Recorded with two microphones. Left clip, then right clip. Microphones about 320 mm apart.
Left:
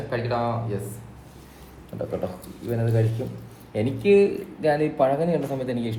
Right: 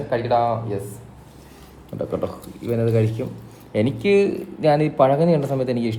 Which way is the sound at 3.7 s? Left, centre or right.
Right.